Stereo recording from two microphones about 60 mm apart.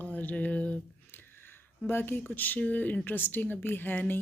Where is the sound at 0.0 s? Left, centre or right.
Left.